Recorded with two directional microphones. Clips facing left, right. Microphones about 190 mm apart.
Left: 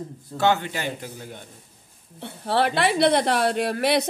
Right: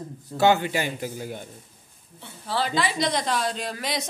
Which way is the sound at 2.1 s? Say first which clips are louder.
Left 5 dB; 65° left (ahead or behind).